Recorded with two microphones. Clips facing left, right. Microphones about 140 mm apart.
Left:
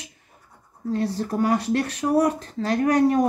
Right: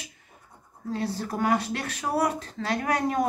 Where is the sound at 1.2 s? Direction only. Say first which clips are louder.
Left 2 dB; 35° left (ahead or behind).